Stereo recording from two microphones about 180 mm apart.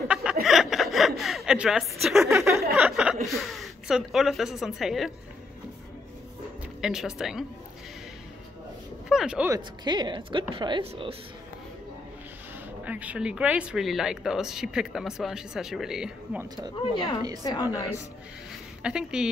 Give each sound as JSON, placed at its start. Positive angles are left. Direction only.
{"t": 0.1, "sound": "chuckle", "side_deg": -5}
{"t": 2.3, "sound": "a sound", "side_deg": -15}
{"t": 2.9, "sound": "speech", "side_deg": -5}
{"t": 6.8, "sound": "speech", "side_deg": -5}
{"t": 9.1, "sound": "speech", "side_deg": -5}
{"t": 9.5, "sound": "a woman's voice", "side_deg": -25}
{"t": 12.8, "sound": "speech", "side_deg": -10}
{"t": 16.8, "sound": "a woman's voice", "side_deg": 25}
{"t": 17.2, "sound": "a woman's voice", "side_deg": -20}
{"t": 18.8, "sound": "speech", "side_deg": -5}